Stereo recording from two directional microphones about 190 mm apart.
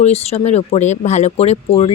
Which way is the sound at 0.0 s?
35° left (ahead or behind).